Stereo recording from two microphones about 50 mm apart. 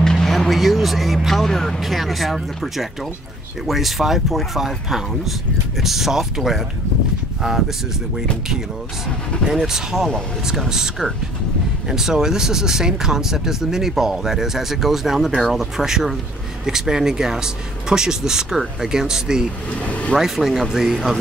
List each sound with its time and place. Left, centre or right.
0.0 s speech: centre
9.5 s speech: centre
19.8 s speech: left
20.2 s speech: centre